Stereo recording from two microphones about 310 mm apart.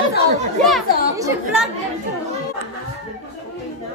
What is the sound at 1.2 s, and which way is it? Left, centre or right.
Speech, centre.